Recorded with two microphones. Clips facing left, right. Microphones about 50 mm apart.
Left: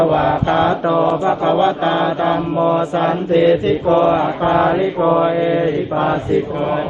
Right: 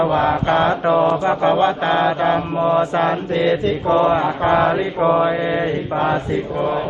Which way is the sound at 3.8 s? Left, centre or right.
Left.